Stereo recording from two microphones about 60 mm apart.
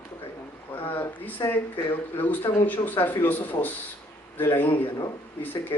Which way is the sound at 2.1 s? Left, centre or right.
Left.